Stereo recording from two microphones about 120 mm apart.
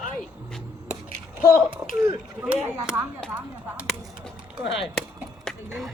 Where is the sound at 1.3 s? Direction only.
15° right (ahead or behind).